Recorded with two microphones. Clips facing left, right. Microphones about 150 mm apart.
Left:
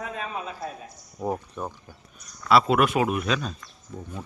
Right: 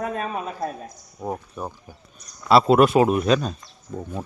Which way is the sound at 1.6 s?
10° right (ahead or behind).